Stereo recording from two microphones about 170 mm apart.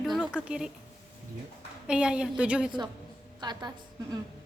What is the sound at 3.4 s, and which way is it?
Speech, 25° right (ahead or behind).